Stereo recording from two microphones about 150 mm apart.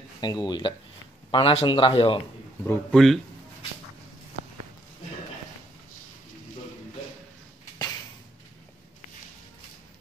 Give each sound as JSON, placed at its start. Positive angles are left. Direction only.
{"t": 0.2, "sound": "speech", "side_deg": 30}
{"t": 2.6, "sound": "a man's voice", "side_deg": 15}